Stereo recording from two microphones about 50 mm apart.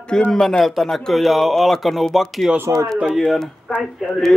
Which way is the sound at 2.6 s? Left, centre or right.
Right.